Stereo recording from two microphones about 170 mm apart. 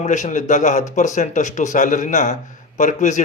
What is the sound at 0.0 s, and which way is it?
A man's voice, 45° left (ahead or behind).